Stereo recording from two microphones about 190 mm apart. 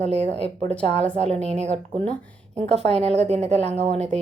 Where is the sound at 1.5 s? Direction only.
35° right (ahead or behind).